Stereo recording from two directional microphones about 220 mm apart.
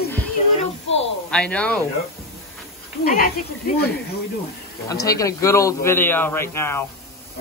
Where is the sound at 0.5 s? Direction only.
30° left (ahead or behind).